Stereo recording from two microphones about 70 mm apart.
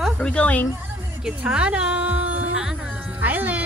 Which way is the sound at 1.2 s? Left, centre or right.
Centre.